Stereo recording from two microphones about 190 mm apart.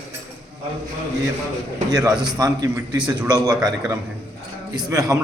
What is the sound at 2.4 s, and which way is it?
Speech, 20° right (ahead or behind).